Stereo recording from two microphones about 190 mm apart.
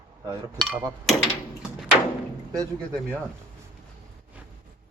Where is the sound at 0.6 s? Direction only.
Centre (ahead or behind).